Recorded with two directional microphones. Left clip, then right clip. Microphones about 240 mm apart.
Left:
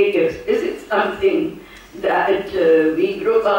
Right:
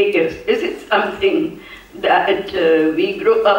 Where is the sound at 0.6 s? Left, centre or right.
Centre.